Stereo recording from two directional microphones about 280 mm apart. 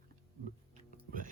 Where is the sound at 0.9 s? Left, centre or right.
Right.